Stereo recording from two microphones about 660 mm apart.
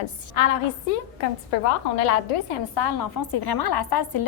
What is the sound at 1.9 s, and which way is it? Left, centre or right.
Speech, left.